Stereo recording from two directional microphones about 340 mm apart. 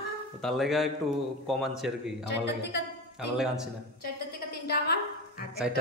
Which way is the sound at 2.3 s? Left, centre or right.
Left.